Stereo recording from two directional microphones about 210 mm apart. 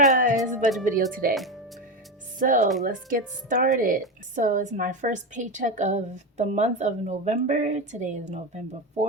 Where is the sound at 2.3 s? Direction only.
40° right (ahead or behind).